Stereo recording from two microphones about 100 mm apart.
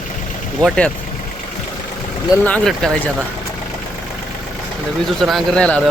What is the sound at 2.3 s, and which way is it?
Speech, 40° left (ahead or behind).